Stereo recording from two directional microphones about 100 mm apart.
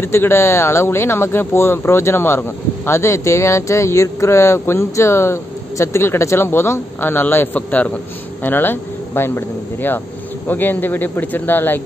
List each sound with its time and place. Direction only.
0.0 s speech: 25° left (ahead or behind)